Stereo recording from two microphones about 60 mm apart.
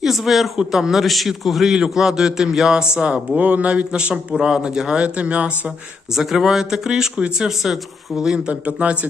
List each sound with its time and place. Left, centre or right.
0.0 s a man's voice: centre
6.1 s a man's voice: centre
8.6 s speech: right